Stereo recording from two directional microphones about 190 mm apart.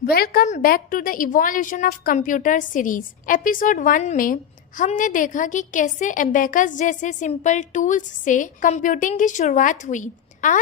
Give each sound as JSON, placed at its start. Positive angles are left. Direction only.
{"t": 0.0, "sound": "a woman's voice", "side_deg": 50}